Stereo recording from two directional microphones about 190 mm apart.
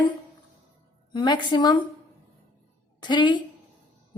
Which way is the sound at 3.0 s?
25° left (ahead or behind).